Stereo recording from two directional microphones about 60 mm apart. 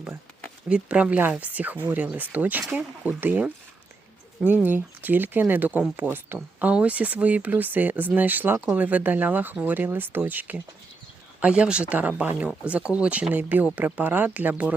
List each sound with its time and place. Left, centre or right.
0.7 s speech: centre
4.5 s speech: right
6.7 s speech: right